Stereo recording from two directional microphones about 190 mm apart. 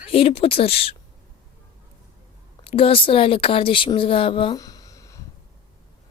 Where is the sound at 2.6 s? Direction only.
30° left (ahead or behind).